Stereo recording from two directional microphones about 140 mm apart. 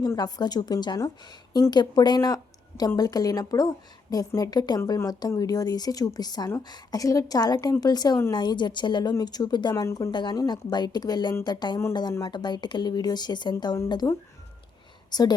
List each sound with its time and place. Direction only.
0.0 s a woman's voice: 25° left (ahead or behind)
9.7 s a woman's voice: 20° left (ahead or behind)
10.1 s speech: 35° left (ahead or behind)
15.1 s a woman's voice: 30° left (ahead or behind)